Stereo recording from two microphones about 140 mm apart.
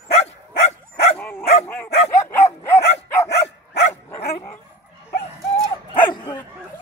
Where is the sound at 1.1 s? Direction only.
15° left (ahead or behind).